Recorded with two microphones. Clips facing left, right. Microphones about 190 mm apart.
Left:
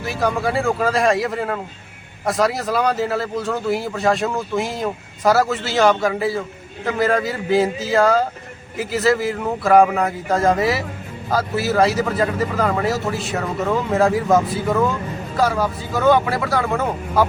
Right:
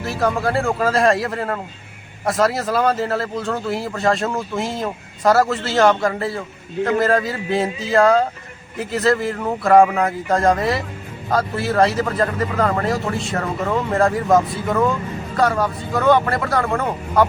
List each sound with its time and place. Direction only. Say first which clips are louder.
0.0 s speech: right 1 dB; centre (ahead or behind)